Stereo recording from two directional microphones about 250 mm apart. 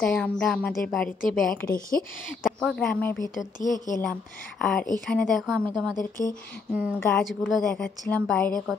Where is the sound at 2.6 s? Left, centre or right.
Centre.